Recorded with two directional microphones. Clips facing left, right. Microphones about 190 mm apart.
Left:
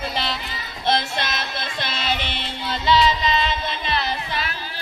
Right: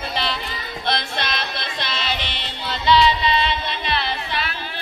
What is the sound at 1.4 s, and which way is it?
Music, 45° left (ahead or behind).